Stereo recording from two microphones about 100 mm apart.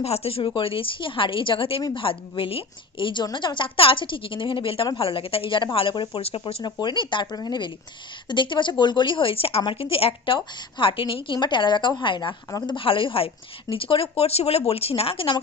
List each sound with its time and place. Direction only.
0.0 s a woman's voice: 85° left; by 6.2 s 55° left (ahead or behind)
6.2 s a woman's voice: 75° left (ahead or behind)
6.6 s a woman's voice: 50° left (ahead or behind); by 15.4 s 65° left (ahead or behind)